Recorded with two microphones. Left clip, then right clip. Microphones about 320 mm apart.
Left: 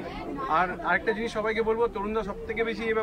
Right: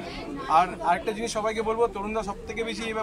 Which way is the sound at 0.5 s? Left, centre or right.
Centre.